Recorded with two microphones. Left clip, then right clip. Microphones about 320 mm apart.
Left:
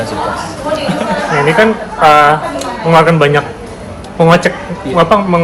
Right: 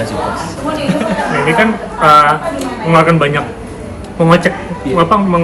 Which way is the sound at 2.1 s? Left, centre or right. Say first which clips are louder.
Even; left.